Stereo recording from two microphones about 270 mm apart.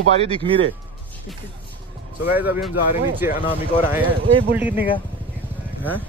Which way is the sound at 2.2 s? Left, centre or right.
Centre.